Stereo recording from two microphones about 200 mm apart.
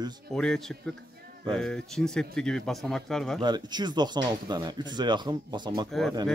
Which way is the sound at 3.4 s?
20° right (ahead or behind).